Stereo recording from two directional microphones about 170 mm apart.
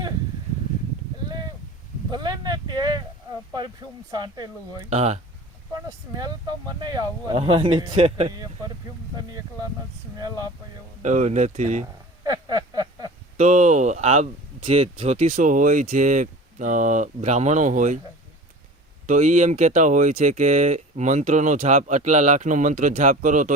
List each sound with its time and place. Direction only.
2.0 s a sound: 25° right (ahead or behind)
4.1 s speech: 25° right (ahead or behind)
4.9 s speech: 40° right (ahead or behind)
6.1 s speech: 20° right (ahead or behind)
11.0 s speech: 45° right (ahead or behind)
12.2 s a sound: 20° right (ahead or behind)
13.3 s speech: 45° right (ahead or behind)
19.0 s speech: 45° right (ahead or behind)